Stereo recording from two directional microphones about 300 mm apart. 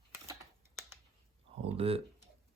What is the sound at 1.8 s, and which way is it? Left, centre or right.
Speech, centre.